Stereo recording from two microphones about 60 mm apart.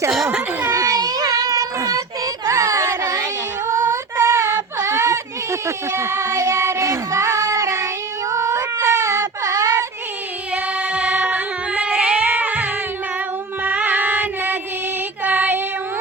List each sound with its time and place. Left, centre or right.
0.3 s children playing: right
0.8 s child singing: right
3.7 s female singing: right
4.3 s a sound: right
10.5 s child singing: right
15.2 s music: right